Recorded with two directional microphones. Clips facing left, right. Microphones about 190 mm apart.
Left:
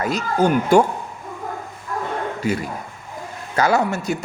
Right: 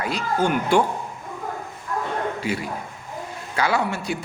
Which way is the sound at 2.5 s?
45° left (ahead or behind).